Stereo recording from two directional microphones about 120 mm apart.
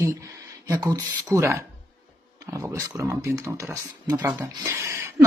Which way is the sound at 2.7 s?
25° right (ahead or behind).